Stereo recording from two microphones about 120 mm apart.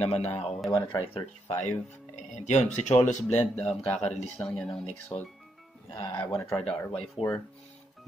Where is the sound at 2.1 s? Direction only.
80° left; by 3.9 s 60° left (ahead or behind).